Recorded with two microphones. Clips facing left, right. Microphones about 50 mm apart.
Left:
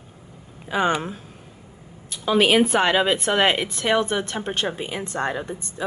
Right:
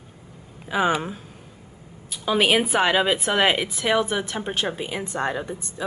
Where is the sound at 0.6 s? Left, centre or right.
Centre.